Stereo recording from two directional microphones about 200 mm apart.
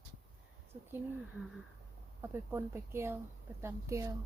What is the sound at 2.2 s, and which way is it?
Speech, 10° right (ahead or behind).